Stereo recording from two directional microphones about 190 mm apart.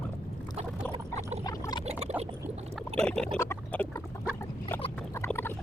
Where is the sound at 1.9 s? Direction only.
35° right (ahead or behind).